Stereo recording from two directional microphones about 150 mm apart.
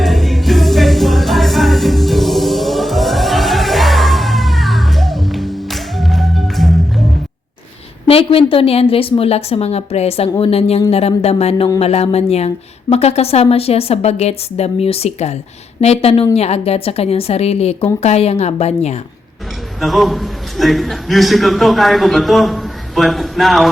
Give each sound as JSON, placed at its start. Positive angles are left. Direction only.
{"t": 0.0, "sound": "music", "side_deg": 0}
{"t": 8.0, "sound": "a woman's voice", "side_deg": 40}
{"t": 19.8, "sound": "a man's voice", "side_deg": 0}